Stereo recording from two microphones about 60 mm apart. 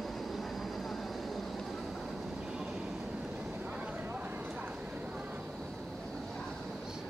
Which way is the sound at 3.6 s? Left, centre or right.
Right.